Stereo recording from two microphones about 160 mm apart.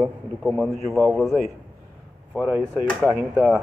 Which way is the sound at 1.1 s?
Centre (ahead or behind).